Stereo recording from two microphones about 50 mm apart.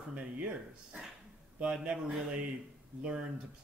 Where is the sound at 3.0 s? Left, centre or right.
Centre.